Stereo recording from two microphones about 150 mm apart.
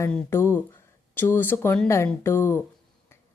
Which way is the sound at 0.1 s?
15° left (ahead or behind).